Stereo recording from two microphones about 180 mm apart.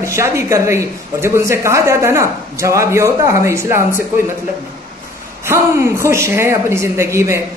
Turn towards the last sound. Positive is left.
turn(degrees=-15)  # may be behind; listen again after turning